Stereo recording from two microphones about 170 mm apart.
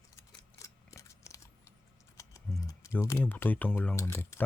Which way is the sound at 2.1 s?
20° left (ahead or behind).